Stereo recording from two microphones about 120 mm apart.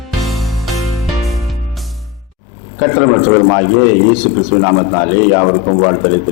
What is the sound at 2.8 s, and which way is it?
A man's voice, 20° left (ahead or behind).